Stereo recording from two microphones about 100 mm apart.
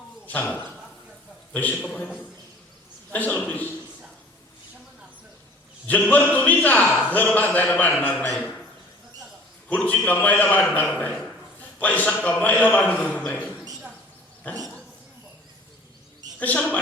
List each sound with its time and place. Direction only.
0.3 s a man's voice: 15° left (ahead or behind)
3.1 s a man's voice: 15° left (ahead or behind)
5.9 s a man's voice: 15° left (ahead or behind)
9.6 s a man's voice: 15° left (ahead or behind)
14.4 s dog: 10° left (ahead or behind)
16.4 s a man's voice: 15° left (ahead or behind)